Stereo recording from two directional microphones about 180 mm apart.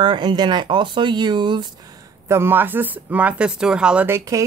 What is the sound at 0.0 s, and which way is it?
Speech, 25° right (ahead or behind).